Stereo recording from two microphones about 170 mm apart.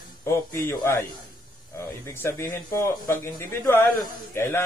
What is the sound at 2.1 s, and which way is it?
A man's voice, 15° left (ahead or behind).